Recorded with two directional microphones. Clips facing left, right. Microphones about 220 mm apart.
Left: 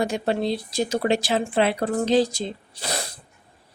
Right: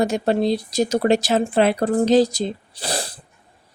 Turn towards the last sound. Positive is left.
turn(degrees=-30)  # may be behind; listen again after turning